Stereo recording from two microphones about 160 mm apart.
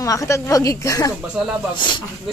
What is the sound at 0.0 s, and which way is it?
Speech, 20° left (ahead or behind).